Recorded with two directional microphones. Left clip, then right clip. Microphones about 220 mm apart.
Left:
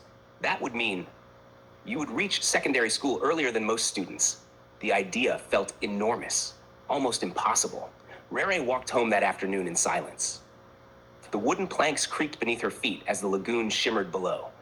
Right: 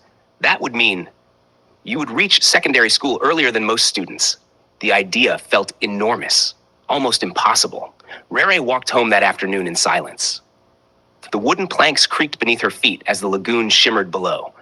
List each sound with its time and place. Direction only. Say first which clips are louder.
0.4 s speech: right 13 dB; 35° right (ahead or behind)